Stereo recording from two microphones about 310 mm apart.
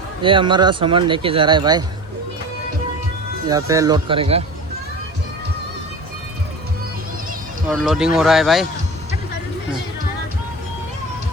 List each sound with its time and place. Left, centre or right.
0.2 s speech: centre
3.4 s speech: centre
7.7 s speech: centre